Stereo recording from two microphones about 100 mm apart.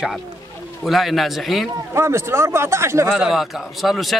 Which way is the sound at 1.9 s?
25° right (ahead or behind).